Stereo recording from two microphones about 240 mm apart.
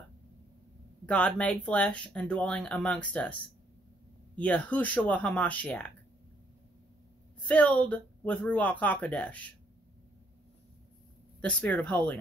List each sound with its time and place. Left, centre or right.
1.0 s speech: centre
4.4 s speech: centre
7.4 s speech: centre
11.4 s speech: centre